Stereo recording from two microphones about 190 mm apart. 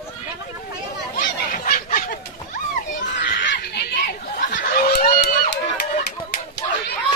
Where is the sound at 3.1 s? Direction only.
70° left (ahead or behind).